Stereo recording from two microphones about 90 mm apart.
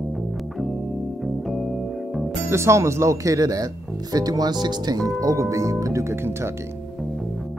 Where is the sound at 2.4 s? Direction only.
30° right (ahead or behind).